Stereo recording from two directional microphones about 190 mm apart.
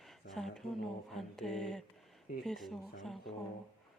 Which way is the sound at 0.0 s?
Centre (ahead or behind).